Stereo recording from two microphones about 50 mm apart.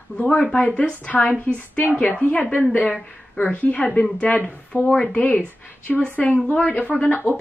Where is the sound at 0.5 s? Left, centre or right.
Left.